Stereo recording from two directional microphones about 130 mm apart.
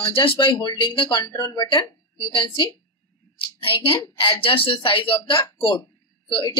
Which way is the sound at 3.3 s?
45° left (ahead or behind).